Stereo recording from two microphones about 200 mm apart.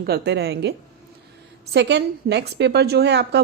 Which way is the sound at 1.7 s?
60° right (ahead or behind).